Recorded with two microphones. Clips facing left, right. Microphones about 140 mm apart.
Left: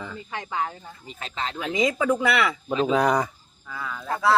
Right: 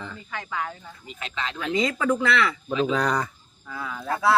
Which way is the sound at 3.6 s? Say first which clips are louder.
Right 1 dB; centre (ahead or behind).